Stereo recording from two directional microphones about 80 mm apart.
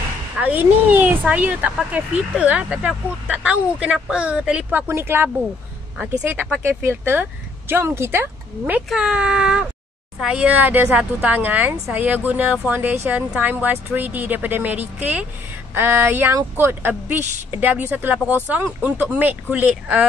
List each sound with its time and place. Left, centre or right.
0.4 s speech: centre
6.6 s speech: right
8.9 s speech: centre
15.7 s speech: right